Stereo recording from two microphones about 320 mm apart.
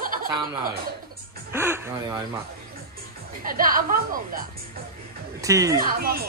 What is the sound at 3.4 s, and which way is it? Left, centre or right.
A woman's voice, right.